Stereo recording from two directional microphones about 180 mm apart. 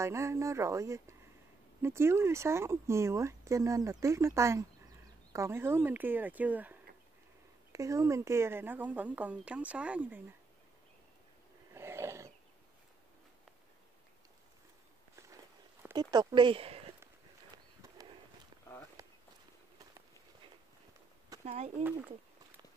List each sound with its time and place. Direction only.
0.0 s speech: 15° right (ahead or behind)
11.7 s wild animals: 15° right (ahead or behind)
15.8 s speech: 20° right (ahead or behind)
17.8 s walk: 20° right (ahead or behind)
21.5 s speech: 35° right (ahead or behind)